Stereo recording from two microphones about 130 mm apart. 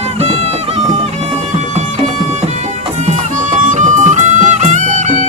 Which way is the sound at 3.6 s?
70° right (ahead or behind).